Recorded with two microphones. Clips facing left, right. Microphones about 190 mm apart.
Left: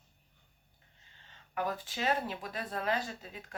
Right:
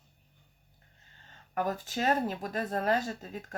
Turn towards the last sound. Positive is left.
turn(degrees=-45)  # may be behind; listen again after turning